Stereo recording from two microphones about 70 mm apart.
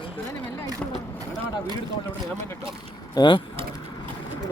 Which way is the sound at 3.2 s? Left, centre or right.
Left.